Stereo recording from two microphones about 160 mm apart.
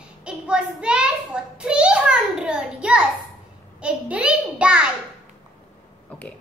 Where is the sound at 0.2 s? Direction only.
5° right (ahead or behind).